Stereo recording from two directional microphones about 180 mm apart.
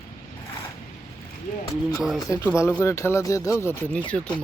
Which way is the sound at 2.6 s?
15° left (ahead or behind).